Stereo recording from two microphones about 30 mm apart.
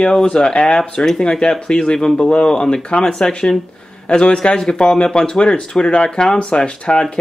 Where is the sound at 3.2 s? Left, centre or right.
Left.